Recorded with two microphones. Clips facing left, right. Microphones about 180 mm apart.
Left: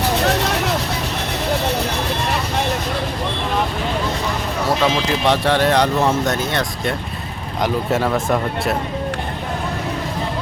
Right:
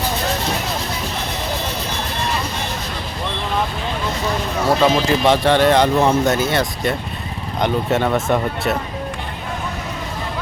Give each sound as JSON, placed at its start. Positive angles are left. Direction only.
{"t": 0.4, "sound": "vehicle", "side_deg": 70}
{"t": 4.8, "sound": "speech", "side_deg": 0}